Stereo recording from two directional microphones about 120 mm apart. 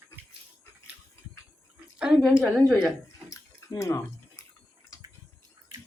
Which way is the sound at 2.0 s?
5° right (ahead or behind).